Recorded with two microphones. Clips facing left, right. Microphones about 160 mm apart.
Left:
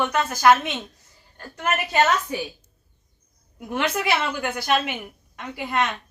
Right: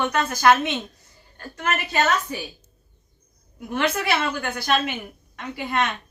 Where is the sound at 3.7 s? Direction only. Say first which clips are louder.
Even; 10° left (ahead or behind).